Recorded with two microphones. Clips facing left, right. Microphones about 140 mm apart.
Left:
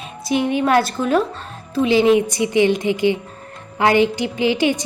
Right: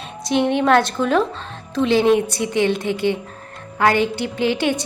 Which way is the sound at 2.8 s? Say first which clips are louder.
Left 3 dB; 55° right (ahead or behind).